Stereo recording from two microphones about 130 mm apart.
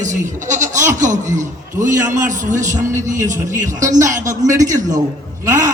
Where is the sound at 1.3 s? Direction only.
75° right (ahead or behind).